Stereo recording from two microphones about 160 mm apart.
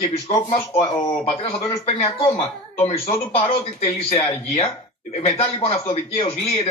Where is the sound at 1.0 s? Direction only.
30° left (ahead or behind).